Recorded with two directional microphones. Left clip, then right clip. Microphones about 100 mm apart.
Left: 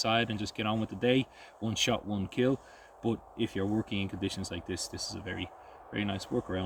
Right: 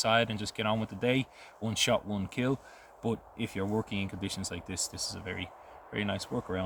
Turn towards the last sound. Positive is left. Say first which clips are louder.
# even
turn(degrees=-35)  # may be behind; listen again after turning